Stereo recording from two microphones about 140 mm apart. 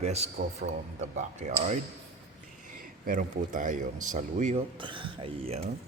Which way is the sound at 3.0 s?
70° right (ahead or behind).